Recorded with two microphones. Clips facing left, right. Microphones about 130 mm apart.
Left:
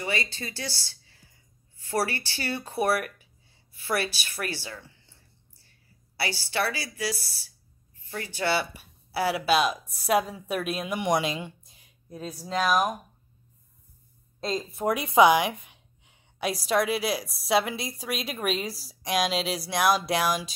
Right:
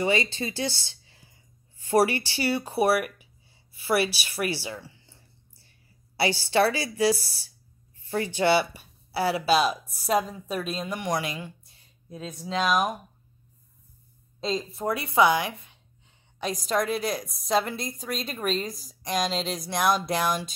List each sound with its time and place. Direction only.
0.0 s a woman's voice: 20° right (ahead or behind)
6.1 s a woman's voice: 25° right (ahead or behind)
8.7 s a woman's voice: 5° left (ahead or behind); by 11.8 s 20° left (ahead or behind)
12.3 s speech: 5° left (ahead or behind)
14.4 s speech: centre (ahead or behind)
14.9 s a woman's voice: 15° left (ahead or behind)